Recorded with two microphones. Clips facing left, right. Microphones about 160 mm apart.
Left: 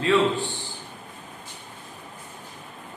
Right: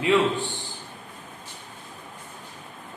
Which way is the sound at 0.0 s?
15° right (ahead or behind).